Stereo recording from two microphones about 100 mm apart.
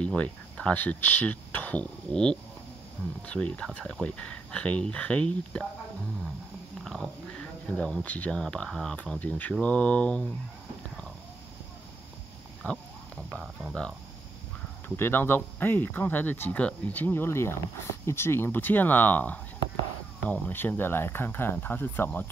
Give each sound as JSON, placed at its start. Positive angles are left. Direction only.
{"t": 0.0, "sound": "speech", "side_deg": 10}
{"t": 6.8, "sound": "dog", "side_deg": 0}
{"t": 7.7, "sound": "speech", "side_deg": 10}
{"t": 12.6, "sound": "speech", "side_deg": 15}
{"t": 15.0, "sound": "speech", "side_deg": 25}